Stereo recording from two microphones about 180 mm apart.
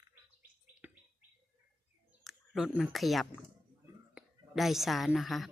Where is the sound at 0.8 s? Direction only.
10° right (ahead or behind).